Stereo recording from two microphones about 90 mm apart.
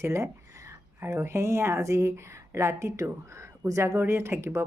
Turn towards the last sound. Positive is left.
turn(degrees=-30)  # may be behind; listen again after turning